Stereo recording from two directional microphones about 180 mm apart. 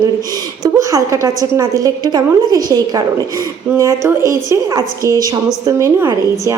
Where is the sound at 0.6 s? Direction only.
20° right (ahead or behind).